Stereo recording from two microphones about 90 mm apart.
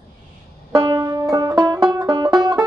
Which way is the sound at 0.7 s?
30° right (ahead or behind).